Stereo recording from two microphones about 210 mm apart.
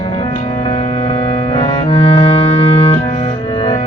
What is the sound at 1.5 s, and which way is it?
Music, 25° left (ahead or behind).